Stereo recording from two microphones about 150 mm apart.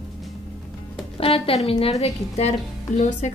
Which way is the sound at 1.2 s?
40° left (ahead or behind).